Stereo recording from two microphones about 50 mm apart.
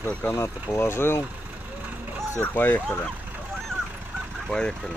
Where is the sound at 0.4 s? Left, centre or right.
Left.